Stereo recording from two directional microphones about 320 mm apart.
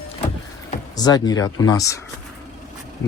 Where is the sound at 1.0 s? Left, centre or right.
Centre.